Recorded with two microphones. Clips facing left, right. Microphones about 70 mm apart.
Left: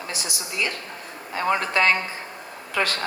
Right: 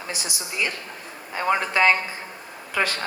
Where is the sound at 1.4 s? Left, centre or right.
Centre.